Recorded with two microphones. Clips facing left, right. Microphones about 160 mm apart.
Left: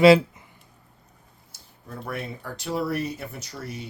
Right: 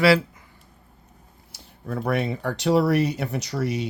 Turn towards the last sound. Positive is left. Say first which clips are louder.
# right 10 dB
turn(degrees=-80)